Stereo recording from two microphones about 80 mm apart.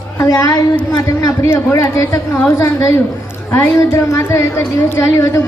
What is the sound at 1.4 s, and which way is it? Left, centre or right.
Speech, left.